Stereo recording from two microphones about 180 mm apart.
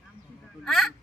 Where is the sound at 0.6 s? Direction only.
Centre (ahead or behind).